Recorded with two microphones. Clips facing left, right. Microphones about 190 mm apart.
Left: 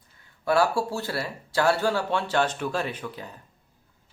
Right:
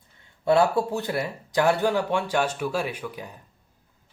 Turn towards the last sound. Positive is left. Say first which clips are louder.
# right 1 dB
turn(degrees=-15)  # may be behind; listen again after turning